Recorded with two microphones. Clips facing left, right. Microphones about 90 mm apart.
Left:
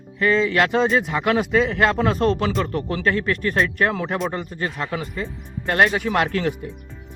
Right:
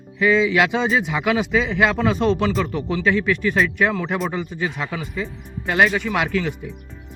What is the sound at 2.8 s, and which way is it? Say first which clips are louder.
Speech: right 1 dB; 50° left (ahead or behind).